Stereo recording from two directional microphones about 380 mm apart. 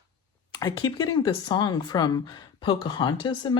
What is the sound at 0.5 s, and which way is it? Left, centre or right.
Speech, centre.